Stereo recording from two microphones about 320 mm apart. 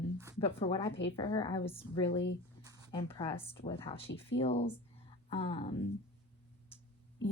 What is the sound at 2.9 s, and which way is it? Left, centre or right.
A woman's voice, centre.